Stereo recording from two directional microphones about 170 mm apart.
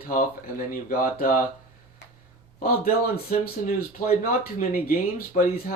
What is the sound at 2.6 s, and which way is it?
Speech, 55° left (ahead or behind).